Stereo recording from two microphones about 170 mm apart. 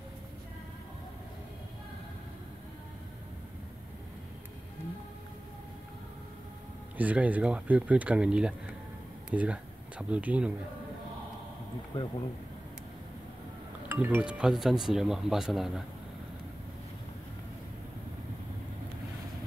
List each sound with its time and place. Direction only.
7.0 s speech: 10° right (ahead or behind)
11.9 s speech: 30° left (ahead or behind)
13.8 s speech: 10° right (ahead or behind)